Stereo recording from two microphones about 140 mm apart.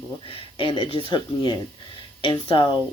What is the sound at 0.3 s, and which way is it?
Speech, 40° left (ahead or behind).